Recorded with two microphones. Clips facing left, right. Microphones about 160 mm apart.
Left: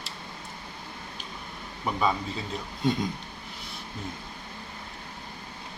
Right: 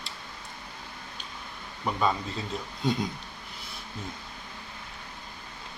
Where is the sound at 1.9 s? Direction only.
5° left (ahead or behind).